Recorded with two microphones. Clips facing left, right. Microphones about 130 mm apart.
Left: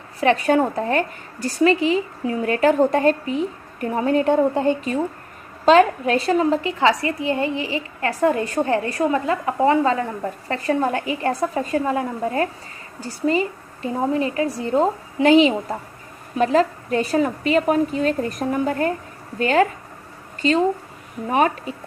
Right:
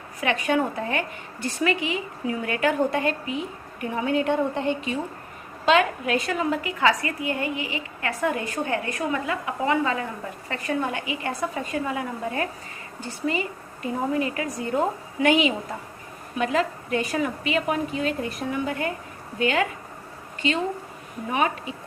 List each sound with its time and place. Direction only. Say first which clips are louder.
0.2 s a woman's voice: left 6 dB; 35° left (ahead or behind)